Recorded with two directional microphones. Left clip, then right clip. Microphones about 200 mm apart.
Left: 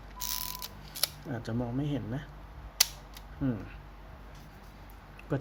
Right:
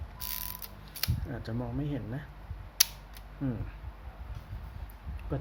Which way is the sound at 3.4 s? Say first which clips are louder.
Left 3 dB; 5° left (ahead or behind).